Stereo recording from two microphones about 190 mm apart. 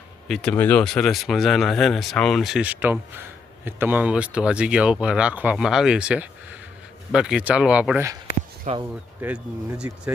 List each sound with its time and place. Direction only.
0.3 s speech: centre (ahead or behind)
8.7 s speech: 40° right (ahead or behind)
9.2 s speech: 5° right (ahead or behind)